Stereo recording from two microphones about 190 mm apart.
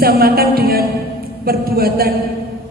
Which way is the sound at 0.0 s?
55° right (ahead or behind).